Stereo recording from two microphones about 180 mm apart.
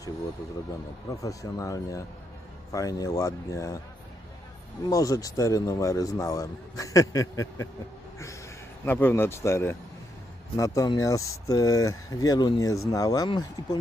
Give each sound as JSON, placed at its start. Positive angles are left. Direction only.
{"t": 1.1, "sound": "speech", "side_deg": 20}
{"t": 4.9, "sound": "speech", "side_deg": 20}
{"t": 8.8, "sound": "speech", "side_deg": 10}